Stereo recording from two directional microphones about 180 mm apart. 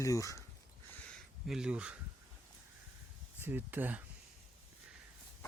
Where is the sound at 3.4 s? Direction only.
10° right (ahead or behind).